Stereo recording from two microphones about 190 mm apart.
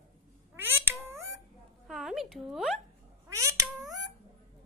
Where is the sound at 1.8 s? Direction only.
Centre (ahead or behind).